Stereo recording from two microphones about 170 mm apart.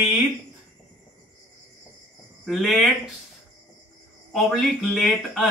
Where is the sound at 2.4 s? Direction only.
Centre (ahead or behind).